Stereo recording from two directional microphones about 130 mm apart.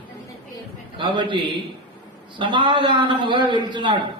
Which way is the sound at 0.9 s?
35° right (ahead or behind).